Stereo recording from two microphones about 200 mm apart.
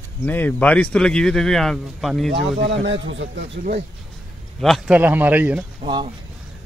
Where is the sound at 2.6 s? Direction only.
65° right (ahead or behind).